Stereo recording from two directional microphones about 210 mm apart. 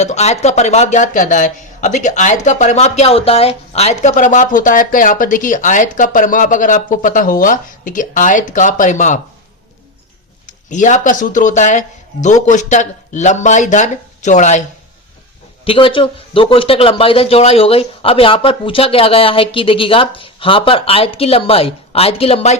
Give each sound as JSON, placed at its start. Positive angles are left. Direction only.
{"t": 0.0, "sound": "speech", "side_deg": 30}
{"t": 10.4, "sound": "speech", "side_deg": 35}
{"t": 15.6, "sound": "speech", "side_deg": 25}